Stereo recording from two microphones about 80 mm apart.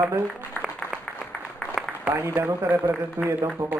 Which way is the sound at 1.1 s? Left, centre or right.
Centre.